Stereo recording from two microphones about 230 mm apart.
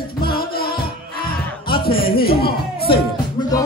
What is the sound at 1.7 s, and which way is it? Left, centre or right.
Music, left.